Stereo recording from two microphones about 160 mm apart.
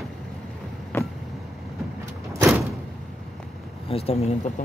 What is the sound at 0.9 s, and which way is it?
Vehicle, 15° left (ahead or behind).